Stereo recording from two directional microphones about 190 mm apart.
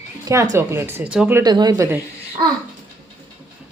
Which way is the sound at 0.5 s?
15° right (ahead or behind).